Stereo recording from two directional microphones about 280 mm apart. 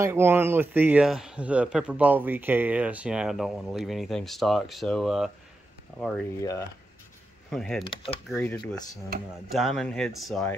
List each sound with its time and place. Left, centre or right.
0.0 s a man's voice: centre
7.8 s speech: centre
8.3 s a man's voice: centre